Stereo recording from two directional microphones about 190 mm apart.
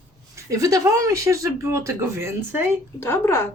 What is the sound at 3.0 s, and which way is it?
Speech, 10° left (ahead or behind).